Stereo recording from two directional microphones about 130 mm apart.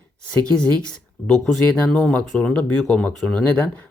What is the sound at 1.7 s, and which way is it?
Speech, 5° left (ahead or behind).